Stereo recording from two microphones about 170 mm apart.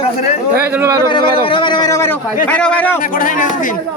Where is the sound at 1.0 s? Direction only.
30° left (ahead or behind); by 3.0 s 10° left (ahead or behind).